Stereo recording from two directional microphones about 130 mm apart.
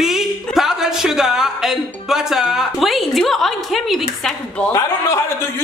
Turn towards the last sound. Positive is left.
turn(degrees=25)  # may be behind; listen again after turning